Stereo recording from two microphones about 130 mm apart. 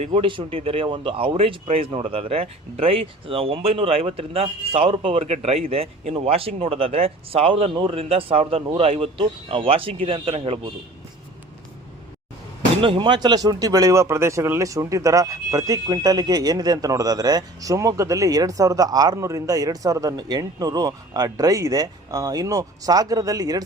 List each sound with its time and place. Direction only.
0.1 s speech: 40° right (ahead or behind)
12.8 s speech: 40° right (ahead or behind)